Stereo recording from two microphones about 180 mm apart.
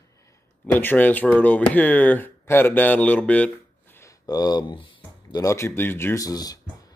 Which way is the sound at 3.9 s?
20° left (ahead or behind).